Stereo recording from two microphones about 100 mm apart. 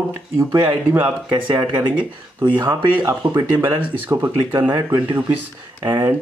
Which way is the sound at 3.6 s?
20° right (ahead or behind).